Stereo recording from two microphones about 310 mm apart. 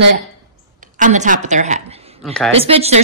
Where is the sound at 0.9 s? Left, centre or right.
Right.